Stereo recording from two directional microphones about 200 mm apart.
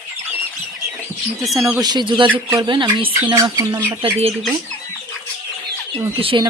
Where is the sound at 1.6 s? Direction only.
15° right (ahead or behind).